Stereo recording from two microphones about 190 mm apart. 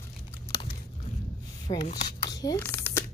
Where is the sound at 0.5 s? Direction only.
30° left (ahead or behind).